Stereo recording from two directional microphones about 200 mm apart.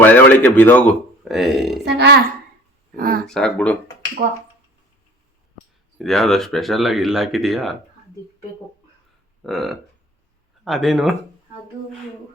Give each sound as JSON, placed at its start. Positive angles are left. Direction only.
{"t": 0.0, "sound": "speech", "side_deg": 10}
{"t": 1.8, "sound": "a child's voice", "side_deg": -55}
{"t": 2.9, "sound": "speech", "side_deg": -45}
{"t": 3.2, "sound": "speech", "side_deg": 5}
{"t": 6.0, "sound": "speech", "side_deg": 0}
{"t": 9.5, "sound": "speech", "side_deg": 0}